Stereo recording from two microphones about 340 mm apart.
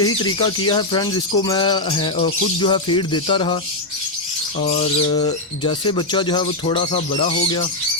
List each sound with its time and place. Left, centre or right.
0.0 s speech: centre
4.6 s speech: centre